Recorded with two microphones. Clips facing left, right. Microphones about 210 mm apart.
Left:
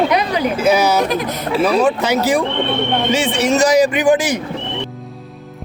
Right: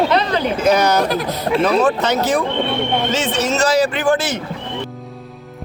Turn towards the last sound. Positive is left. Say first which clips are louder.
# left 3 dB
turn(degrees=15)  # may be behind; listen again after turning